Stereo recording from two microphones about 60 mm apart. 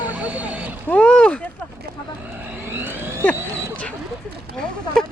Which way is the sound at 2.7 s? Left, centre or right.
Right.